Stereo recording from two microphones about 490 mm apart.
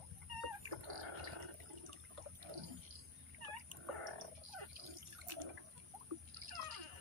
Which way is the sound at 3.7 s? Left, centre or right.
Right.